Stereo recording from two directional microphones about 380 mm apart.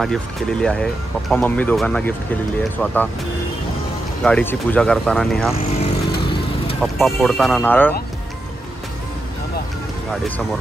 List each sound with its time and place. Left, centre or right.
0.0 s speech: centre
4.2 s speech: centre
5.5 s vehicle: centre
6.8 s speech: centre